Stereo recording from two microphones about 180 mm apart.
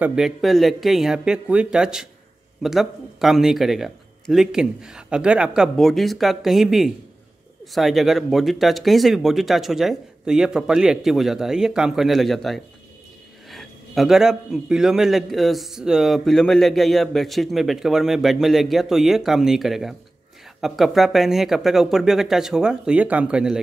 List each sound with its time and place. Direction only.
0.0 s a man's voice: 5° right (ahead or behind)